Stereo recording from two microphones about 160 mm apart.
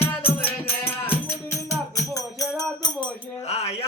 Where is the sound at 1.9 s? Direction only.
20° left (ahead or behind).